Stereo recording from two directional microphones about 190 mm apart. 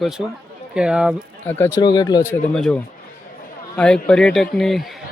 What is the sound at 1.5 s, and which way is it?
Speech, 15° left (ahead or behind).